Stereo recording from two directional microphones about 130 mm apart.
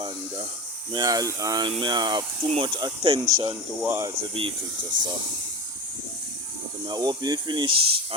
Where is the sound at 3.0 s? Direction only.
45° right (ahead or behind).